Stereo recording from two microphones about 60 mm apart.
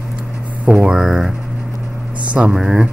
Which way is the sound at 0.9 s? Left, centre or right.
Centre.